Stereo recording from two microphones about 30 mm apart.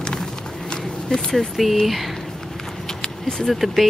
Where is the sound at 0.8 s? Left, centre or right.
Left.